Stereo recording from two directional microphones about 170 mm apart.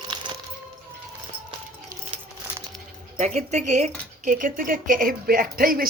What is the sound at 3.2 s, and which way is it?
Speech, 45° right (ahead or behind).